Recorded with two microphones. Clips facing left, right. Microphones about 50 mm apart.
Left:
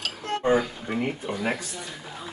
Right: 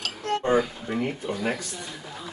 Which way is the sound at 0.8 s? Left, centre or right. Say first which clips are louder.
Even; centre.